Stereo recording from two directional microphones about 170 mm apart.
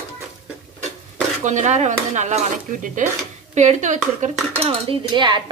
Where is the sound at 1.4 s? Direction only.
45° right (ahead or behind).